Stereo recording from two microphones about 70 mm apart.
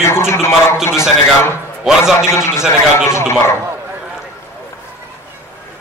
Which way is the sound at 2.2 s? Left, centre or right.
Left.